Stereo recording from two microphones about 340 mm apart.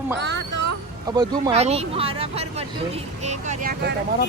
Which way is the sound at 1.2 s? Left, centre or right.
Centre.